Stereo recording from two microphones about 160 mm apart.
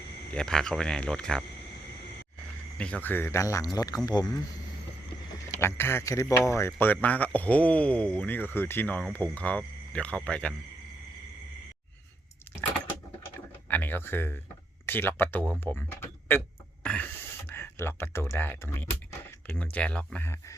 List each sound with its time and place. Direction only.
0.3 s speech: 5° left (ahead or behind)
2.7 s speech: 5° left (ahead or behind); by 4.4 s 25° left (ahead or behind)
5.5 s speech: 15° left (ahead or behind)
9.3 s cricket: 10° left (ahead or behind)
10.2 s speech: 10° left (ahead or behind)
13.7 s speech: 10° left (ahead or behind)